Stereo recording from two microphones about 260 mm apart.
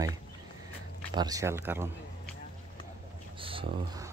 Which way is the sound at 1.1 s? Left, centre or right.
Centre.